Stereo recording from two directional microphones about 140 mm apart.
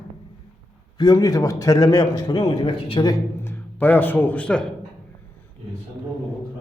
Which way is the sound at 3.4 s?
15° left (ahead or behind).